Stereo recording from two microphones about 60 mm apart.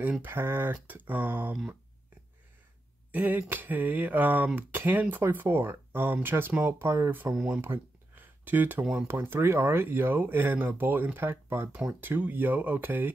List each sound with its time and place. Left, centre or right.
0.2 s speech: right
3.1 s speech: right
7.6 s a sound: right
9.0 s speech: right
11.7 s speech: right